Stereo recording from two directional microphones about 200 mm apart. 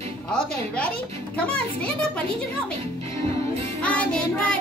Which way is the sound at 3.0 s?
30° right (ahead or behind).